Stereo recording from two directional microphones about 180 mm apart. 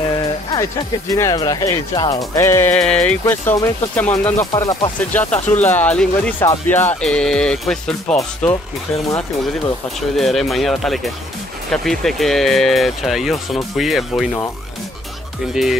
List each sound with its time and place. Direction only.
0.1 s music: 20° left (ahead or behind)
1.1 s speech: 20° left (ahead or behind)
4.6 s speech: 20° left (ahead or behind)
5.1 s speech: 10° left (ahead or behind)
9.9 s speech: centre (ahead or behind)